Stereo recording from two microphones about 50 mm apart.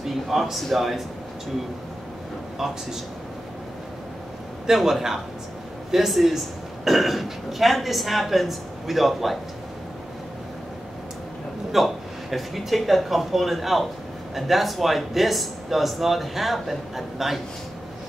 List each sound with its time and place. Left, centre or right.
0.0 s speech: centre
2.6 s a man's voice: centre
4.6 s a man's voice: centre
11.7 s speech: centre